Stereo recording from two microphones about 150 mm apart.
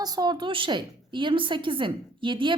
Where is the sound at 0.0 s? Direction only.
25° right (ahead or behind).